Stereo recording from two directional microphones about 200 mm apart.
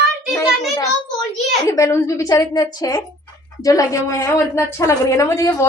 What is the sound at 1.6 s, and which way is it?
A woman's voice, 15° left (ahead or behind).